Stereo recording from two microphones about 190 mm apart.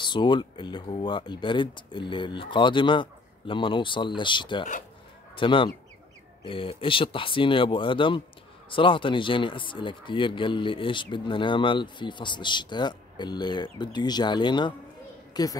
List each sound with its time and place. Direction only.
0.0 s speech: 25° left (ahead or behind)